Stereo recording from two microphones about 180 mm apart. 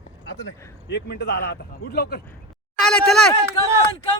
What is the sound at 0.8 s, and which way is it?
Speech, 65° left (ahead or behind).